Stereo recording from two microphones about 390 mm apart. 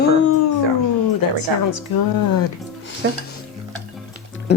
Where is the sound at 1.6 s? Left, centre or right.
Left.